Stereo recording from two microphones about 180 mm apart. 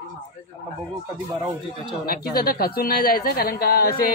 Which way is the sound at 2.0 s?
60° left (ahead or behind).